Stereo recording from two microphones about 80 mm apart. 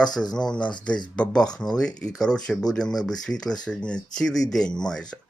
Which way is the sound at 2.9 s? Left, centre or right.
Left.